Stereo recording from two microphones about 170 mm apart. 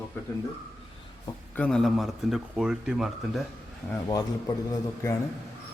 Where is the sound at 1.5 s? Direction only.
5° left (ahead or behind).